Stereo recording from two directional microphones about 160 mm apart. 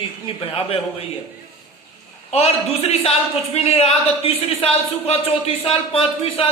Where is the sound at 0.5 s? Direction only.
35° left (ahead or behind).